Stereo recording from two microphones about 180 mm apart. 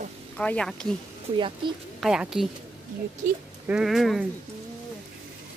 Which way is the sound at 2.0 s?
5° right (ahead or behind).